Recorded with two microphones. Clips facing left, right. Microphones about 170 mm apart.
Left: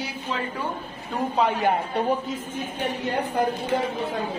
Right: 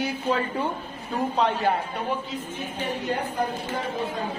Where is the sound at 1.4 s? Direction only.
5° left (ahead or behind).